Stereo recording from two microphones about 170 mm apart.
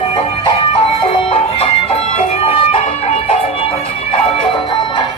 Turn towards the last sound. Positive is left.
turn(degrees=35)  # may be behind; listen again after turning